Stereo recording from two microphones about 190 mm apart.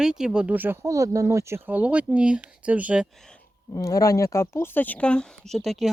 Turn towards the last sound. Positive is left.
turn(degrees=0)  # may be behind; listen again after turning